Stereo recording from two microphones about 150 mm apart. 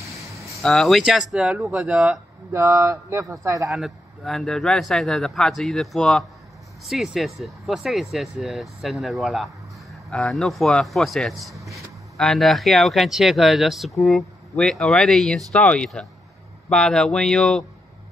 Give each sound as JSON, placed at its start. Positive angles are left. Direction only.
{"t": 0.4, "sound": "speech", "side_deg": 0}
{"t": 2.5, "sound": "speech", "side_deg": -20}
{"t": 3.6, "sound": "speech", "side_deg": 0}